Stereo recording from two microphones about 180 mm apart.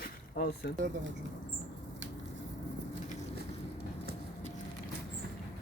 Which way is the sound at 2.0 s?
90° right.